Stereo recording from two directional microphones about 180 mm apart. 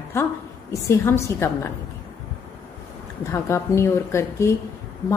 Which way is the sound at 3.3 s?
15° left (ahead or behind).